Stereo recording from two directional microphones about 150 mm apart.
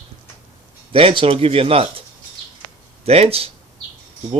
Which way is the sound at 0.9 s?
40° right (ahead or behind).